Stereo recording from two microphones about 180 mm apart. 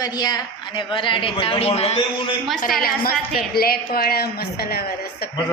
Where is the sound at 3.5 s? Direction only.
60° left (ahead or behind).